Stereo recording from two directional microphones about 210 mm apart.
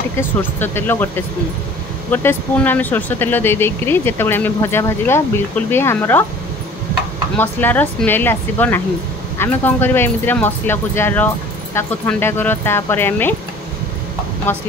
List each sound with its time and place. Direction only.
0.2 s speech: 10° left (ahead or behind)
7.3 s speech: 10° left (ahead or behind)